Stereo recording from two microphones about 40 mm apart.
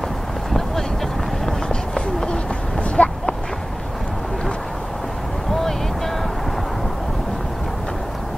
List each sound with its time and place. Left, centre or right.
2.0 s run: centre
3.0 s a sound: left
5.5 s vehicle: centre